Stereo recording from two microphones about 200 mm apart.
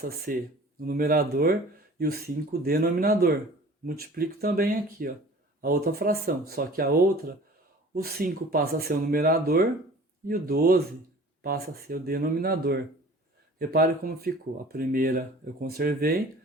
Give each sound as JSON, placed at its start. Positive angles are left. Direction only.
{"t": 0.0, "sound": "speech", "side_deg": -50}